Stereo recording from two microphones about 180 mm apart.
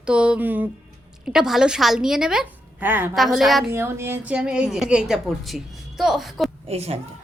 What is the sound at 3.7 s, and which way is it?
A woman's voice, 15° right (ahead or behind).